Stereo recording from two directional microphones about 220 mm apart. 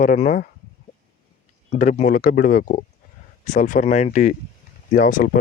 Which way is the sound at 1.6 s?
30° left (ahead or behind).